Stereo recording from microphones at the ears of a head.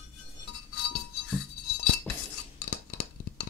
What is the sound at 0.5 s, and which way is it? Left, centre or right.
Music, left.